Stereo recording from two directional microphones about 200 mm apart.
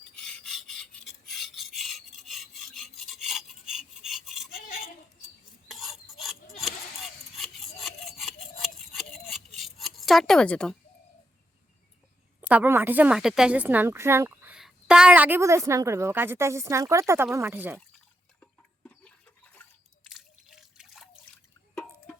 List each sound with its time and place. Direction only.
0.2 s rub: 5° left (ahead or behind)
1.3 s filing: centre (ahead or behind)
5.6 s a sound: centre (ahead or behind)
7.3 s sawing: centre (ahead or behind)
9.6 s rub: centre (ahead or behind)
12.4 s a woman's voice: 10° right (ahead or behind)
18.3 s a sound: 5° left (ahead or behind)
20.1 s drip: centre (ahead or behind)